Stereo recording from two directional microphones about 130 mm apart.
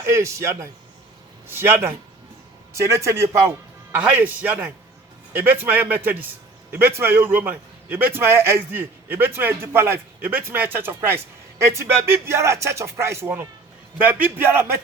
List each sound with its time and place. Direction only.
0.0 s a man's voice: 20° right (ahead or behind)
3.9 s a man's voice: 10° right (ahead or behind)